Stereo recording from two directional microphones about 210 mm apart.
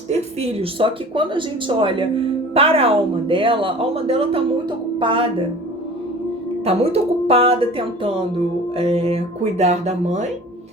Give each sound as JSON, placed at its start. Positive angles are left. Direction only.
{"t": 0.1, "sound": "speech", "side_deg": -30}
{"t": 6.7, "sound": "speech", "side_deg": -30}